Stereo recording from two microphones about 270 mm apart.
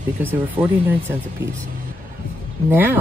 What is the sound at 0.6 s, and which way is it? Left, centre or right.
Speech, centre.